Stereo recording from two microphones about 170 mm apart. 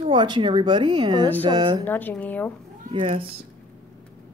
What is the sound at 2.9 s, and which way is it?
Speech, 35° right (ahead or behind).